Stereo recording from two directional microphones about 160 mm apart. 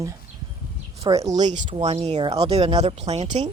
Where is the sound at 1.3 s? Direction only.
50° right (ahead or behind).